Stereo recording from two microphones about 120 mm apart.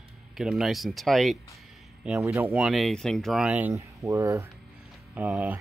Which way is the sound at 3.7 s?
25° right (ahead or behind).